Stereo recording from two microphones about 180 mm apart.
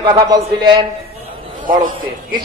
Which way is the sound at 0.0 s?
25° right (ahead or behind).